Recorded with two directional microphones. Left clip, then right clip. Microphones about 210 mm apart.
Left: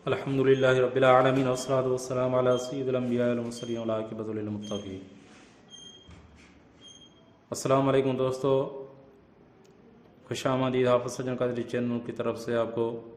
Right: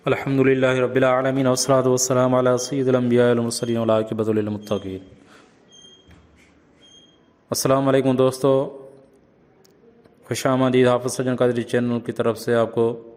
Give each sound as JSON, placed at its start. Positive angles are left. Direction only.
{"t": 0.0, "sound": "a man's voice", "side_deg": -35}
{"t": 7.5, "sound": "speech", "side_deg": -40}
{"t": 10.2, "sound": "speech", "side_deg": -30}